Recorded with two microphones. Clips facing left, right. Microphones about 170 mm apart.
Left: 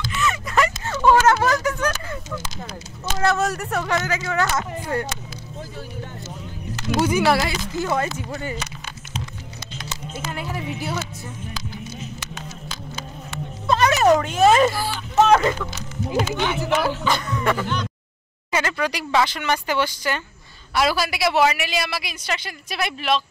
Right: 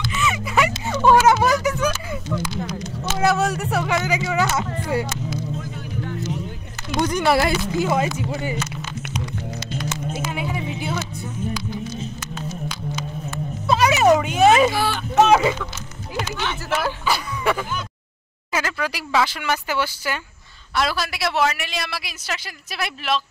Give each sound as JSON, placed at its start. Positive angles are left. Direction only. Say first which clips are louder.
{"t": 0.2, "sound": "music", "louder": "even", "side_deg": -10}
{"t": 3.2, "sound": "speech", "louder": "right 1 dB", "side_deg": -5}
{"t": 7.0, "sound": "speech", "louder": "left 1 dB", "side_deg": 5}
{"t": 7.8, "sound": "speech", "louder": "even", "side_deg": -15}
{"t": 10.1, "sound": "music", "louder": "left 1 dB", "side_deg": 0}
{"t": 13.7, "sound": "a sound", "louder": "right 1 dB", "side_deg": -10}
{"t": 14.7, "sound": "speech", "louder": "right 4 dB", "side_deg": -75}
{"t": 15.1, "sound": "speech", "louder": "right 1 dB", "side_deg": -5}
{"t": 16.3, "sound": "speech", "louder": "left 4 dB", "side_deg": 15}
{"t": 17.0, "sound": "speech", "louder": "even", "side_deg": -5}
{"t": 20.7, "sound": "a woman's voice", "louder": "left 2 dB", "side_deg": 5}